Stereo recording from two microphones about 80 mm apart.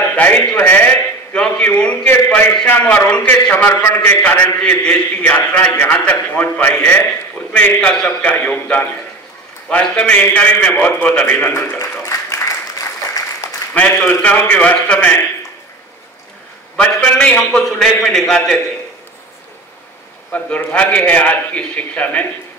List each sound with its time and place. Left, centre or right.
0.1 s a man's voice: left
1.3 s a man's voice: centre
11.8 s applause: left
13.7 s a man's voice: centre
17.2 s a man's voice: centre
20.3 s a man's voice: centre